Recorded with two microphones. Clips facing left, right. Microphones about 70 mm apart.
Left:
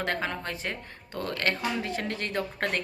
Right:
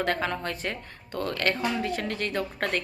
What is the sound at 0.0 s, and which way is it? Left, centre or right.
Speech, centre.